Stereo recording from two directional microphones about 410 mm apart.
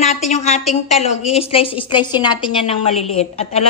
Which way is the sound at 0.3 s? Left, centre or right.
Centre.